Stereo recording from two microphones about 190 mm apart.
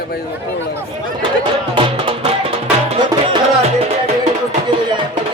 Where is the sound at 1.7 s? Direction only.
30° right (ahead or behind).